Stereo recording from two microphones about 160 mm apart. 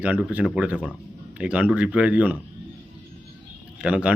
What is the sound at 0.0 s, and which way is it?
A man's voice, 10° right (ahead or behind).